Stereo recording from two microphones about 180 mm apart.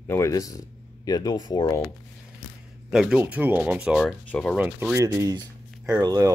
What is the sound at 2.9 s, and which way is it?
Speech, 5° right (ahead or behind).